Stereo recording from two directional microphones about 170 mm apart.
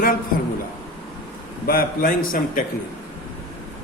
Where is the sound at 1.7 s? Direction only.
60° left (ahead or behind).